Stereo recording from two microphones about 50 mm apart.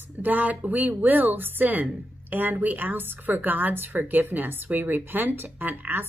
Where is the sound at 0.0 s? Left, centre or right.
Right.